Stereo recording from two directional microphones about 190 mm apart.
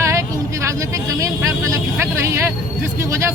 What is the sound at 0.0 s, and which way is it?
Speech, 15° right (ahead or behind).